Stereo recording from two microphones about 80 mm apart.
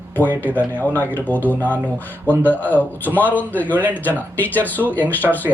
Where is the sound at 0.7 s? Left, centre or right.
Left.